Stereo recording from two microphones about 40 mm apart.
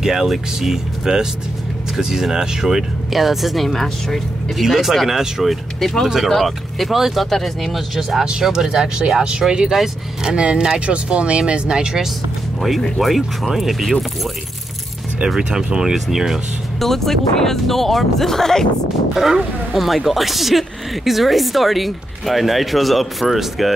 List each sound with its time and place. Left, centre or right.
0.0 s speech: centre
3.1 s speech: centre
4.6 s speech: centre
7.2 s speech: centre
10.2 s speech: right
13.0 s speech: centre
15.2 s speech: centre
16.8 s speech: centre
19.3 s speech: centre